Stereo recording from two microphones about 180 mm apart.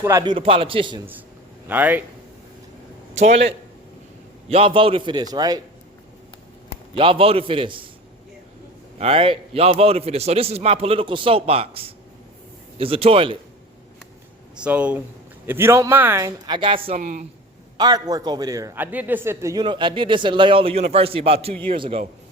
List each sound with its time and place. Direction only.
0.0 s speech: 15° right (ahead or behind)
0.3 s speech: 30° right (ahead or behind)
1.6 s speech: 10° right (ahead or behind)
3.2 s a man's voice: 35° right (ahead or behind)
6.9 s speech: 30° right (ahead or behind)
9.0 s a man's voice: 30° right (ahead or behind)
14.5 s speech: 5° right (ahead or behind); by 17.2 s 40° right (ahead or behind)
17.7 s a man's voice: 20° right (ahead or behind)